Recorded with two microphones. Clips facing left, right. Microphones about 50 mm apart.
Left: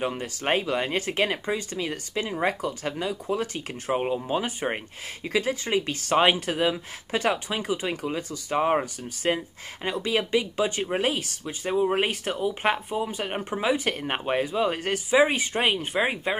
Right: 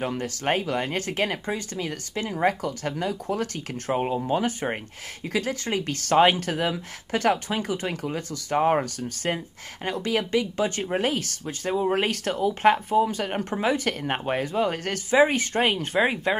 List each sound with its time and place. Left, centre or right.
0.1 s speech: left
0.5 s speech: left
3.9 s speech: centre
4.3 s speech: left
11.4 s speech: centre
15.9 s speech: centre